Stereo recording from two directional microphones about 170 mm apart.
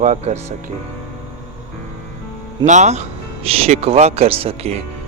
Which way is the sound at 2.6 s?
45° right (ahead or behind).